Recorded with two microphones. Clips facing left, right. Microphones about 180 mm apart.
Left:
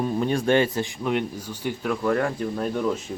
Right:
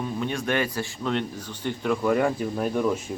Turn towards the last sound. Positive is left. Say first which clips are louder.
# right 1 dB
turn(degrees=-10)  # may be behind; listen again after turning